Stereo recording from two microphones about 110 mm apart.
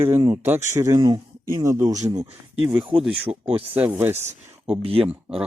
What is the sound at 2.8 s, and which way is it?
Speech, 45° right (ahead or behind).